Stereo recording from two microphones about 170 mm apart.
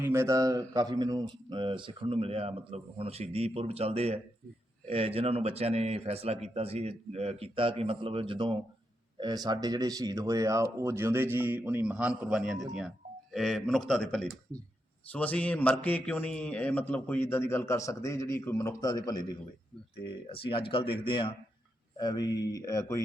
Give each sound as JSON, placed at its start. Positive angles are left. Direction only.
{"t": 0.0, "sound": "a man's voice", "side_deg": -15}